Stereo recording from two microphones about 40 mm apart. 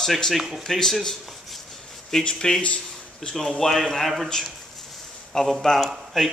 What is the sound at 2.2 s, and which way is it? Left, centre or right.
Speech, centre.